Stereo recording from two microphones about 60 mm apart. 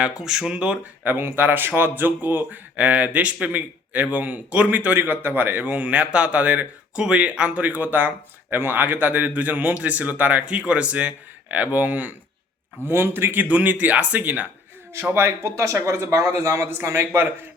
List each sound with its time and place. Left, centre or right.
0.0 s speech: centre
1.0 s speech: right
5.6 s speech: right
12.8 s speech: right
15.1 s a man's voice: right
16.7 s speech: right